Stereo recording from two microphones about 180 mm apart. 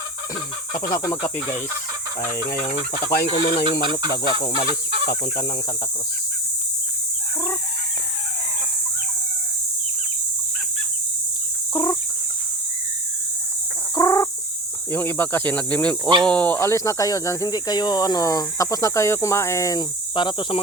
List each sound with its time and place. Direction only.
0.7 s speech: 50° left (ahead or behind)
1.0 s fowl: 25° left (ahead or behind)
3.2 s speech: 35° left (ahead or behind)
4.1 s fowl: 60° left (ahead or behind)
4.4 s fowl: 20° left (ahead or behind)
11.7 s chicken: 25° left (ahead or behind)
13.9 s chicken: 20° left (ahead or behind)
14.9 s speech: 10° left (ahead or behind)